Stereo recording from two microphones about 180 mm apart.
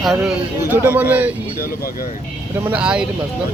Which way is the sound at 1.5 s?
55° left (ahead or behind).